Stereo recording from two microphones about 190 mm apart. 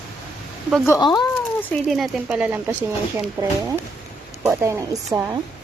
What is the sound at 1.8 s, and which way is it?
A woman's voice, centre (ahead or behind).